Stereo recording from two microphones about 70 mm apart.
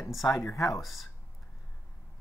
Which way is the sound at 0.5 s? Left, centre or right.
Left.